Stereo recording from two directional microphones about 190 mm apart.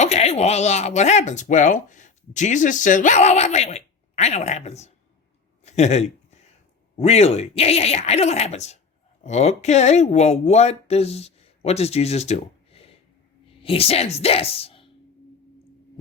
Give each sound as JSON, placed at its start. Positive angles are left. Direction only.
{"t": 0.0, "sound": "speech", "side_deg": 35}
{"t": 5.6, "sound": "a sound", "side_deg": 35}
{"t": 6.9, "sound": "speech", "side_deg": 35}